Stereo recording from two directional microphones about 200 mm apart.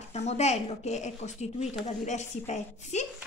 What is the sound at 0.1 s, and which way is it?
A woman's voice, 35° left (ahead or behind).